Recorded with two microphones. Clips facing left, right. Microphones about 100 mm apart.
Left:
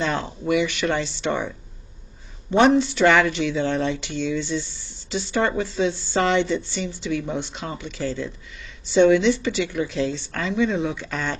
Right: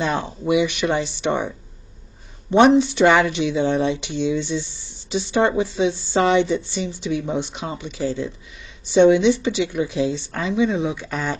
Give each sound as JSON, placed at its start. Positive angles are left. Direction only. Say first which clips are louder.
{"t": 0.0, "sound": "speech", "louder": "right 2 dB", "side_deg": -15}
{"t": 2.5, "sound": "speech", "louder": "right 3 dB", "side_deg": -20}